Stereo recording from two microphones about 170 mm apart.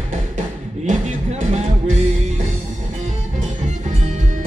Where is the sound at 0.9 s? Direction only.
45° right (ahead or behind).